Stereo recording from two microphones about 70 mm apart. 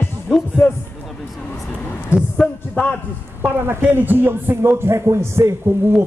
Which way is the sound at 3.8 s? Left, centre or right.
Right.